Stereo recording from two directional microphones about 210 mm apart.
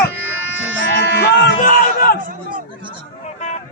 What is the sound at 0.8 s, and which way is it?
Speech, 55° left (ahead or behind).